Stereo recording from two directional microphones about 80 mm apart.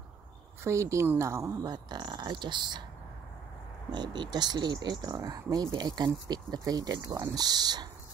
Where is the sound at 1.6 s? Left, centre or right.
Right.